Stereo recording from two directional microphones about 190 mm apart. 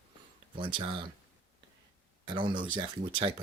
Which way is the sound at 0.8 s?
25° right (ahead or behind).